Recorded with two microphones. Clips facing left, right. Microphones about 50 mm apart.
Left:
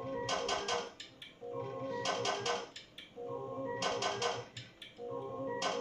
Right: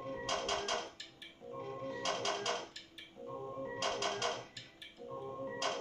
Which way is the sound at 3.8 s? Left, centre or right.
Centre.